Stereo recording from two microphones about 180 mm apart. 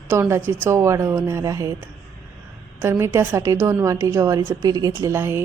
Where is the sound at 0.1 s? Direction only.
15° right (ahead or behind).